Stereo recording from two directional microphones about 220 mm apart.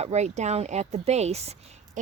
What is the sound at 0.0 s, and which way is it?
Speech, 30° right (ahead or behind).